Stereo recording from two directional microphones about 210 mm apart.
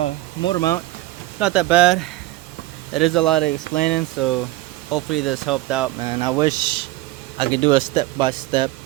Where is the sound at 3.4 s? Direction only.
45° left (ahead or behind).